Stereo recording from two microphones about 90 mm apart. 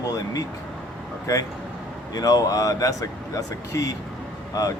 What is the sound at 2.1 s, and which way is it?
Speech, 45° left (ahead or behind).